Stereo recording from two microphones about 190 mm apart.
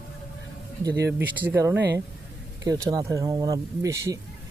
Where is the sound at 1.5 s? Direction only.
10° right (ahead or behind).